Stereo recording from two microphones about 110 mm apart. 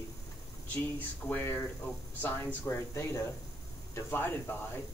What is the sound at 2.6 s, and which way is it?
Speech, 25° left (ahead or behind).